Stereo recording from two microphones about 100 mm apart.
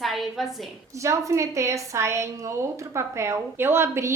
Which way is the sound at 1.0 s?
30° right (ahead or behind).